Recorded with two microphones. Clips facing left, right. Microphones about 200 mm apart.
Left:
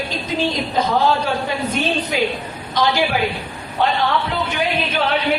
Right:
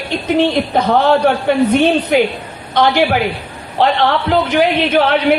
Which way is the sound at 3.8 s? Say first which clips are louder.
Right 5 dB; 85° right.